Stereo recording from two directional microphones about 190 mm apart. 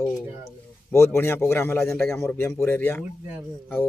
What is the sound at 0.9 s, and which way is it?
Speech, 15° left (ahead or behind).